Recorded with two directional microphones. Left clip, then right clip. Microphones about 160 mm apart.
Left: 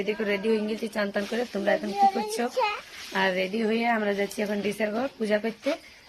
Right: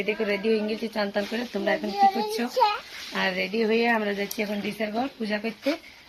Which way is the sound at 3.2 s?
35° left (ahead or behind).